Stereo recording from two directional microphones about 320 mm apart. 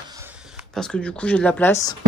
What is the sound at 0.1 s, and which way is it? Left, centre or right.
Speech, centre.